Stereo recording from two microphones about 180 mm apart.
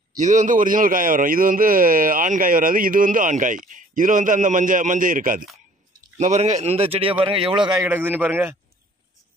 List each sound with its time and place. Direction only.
0.2 s a man's voice: 45° right (ahead or behind); by 7.8 s 25° right (ahead or behind)
7.8 s a man's voice: 10° right (ahead or behind)